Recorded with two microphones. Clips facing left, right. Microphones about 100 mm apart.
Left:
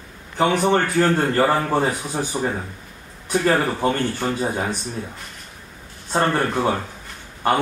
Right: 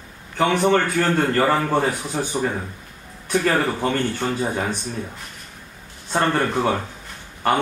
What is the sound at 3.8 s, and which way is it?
Speech, 10° left (ahead or behind).